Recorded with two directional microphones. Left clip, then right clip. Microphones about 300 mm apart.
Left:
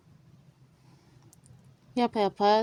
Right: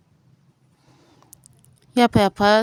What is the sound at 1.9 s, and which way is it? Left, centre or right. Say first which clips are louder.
Speech: right 9 dB; right.